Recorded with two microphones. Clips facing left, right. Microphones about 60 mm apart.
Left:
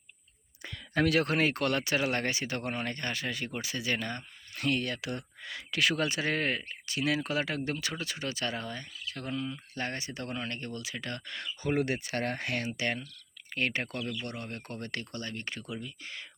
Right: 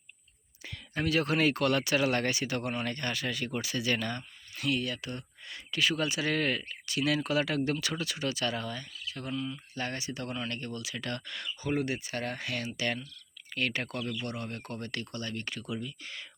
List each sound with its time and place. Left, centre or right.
0.9 s speech: left
1.4 s speech: left
2.9 s speech: left
4.5 s speech: left
4.9 s speech: left
6.0 s speech: left
11.6 s speech: left
14.0 s speech: right
14.3 s speech: left